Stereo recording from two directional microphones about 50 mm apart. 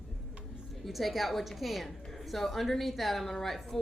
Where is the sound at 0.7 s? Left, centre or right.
Centre.